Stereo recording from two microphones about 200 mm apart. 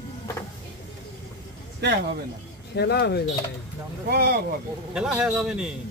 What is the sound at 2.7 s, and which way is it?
Speech, 55° left (ahead or behind).